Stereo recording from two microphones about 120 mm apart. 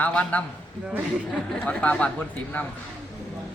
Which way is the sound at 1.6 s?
10° left (ahead or behind).